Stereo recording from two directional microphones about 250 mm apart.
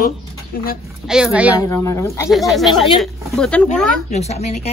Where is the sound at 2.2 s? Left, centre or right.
Centre.